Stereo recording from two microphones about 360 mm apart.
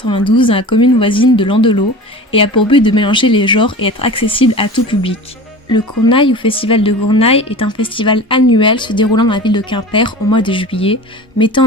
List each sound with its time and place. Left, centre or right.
0.0 s speech: centre